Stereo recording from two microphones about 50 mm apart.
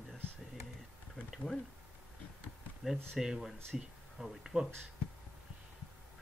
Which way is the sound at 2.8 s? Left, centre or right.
Centre.